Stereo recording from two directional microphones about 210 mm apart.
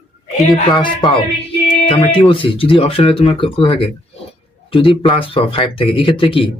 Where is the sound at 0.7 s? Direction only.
20° left (ahead or behind).